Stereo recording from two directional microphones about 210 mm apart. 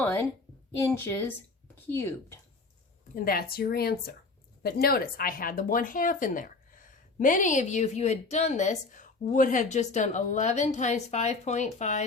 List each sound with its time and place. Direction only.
0.0 s a sound: 10° left (ahead or behind)
0.8 s a woman's voice: 10° left (ahead or behind)
3.2 s speech: 45° left (ahead or behind)